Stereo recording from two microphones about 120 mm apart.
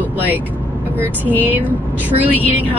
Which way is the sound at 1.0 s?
15° left (ahead or behind).